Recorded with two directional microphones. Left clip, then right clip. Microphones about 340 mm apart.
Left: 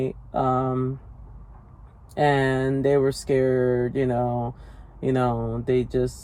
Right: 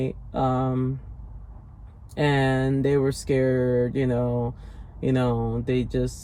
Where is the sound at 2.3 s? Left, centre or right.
Left.